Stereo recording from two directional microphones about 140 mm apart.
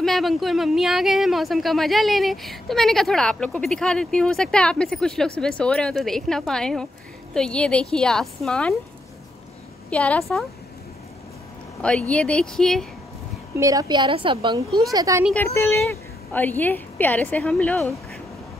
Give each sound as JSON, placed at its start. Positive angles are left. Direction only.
{"t": 0.0, "sound": "speech", "side_deg": 0}
{"t": 9.8, "sound": "a woman's voice", "side_deg": 10}
{"t": 11.8, "sound": "a woman's voice", "side_deg": 10}
{"t": 13.6, "sound": "a woman's voice", "side_deg": -25}
{"t": 14.9, "sound": "speech", "side_deg": -25}
{"t": 15.3, "sound": "a woman's voice", "side_deg": 20}